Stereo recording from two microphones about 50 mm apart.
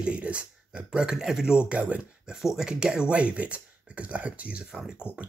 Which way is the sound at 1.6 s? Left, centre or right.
Right.